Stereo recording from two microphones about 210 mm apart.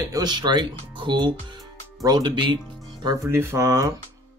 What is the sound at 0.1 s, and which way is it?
Speech, 20° right (ahead or behind).